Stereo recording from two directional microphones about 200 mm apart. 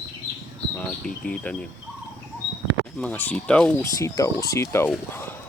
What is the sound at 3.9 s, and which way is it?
Speech, 15° left (ahead or behind).